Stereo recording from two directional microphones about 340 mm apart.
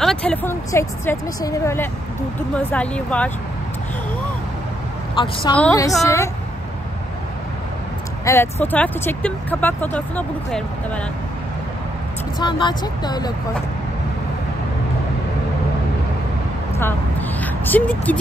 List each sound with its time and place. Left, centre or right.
0.0 s a woman's voice: centre
5.1 s a woman's voice: centre
8.3 s speech: centre
12.4 s a woman's voice: centre
17.4 s speech: centre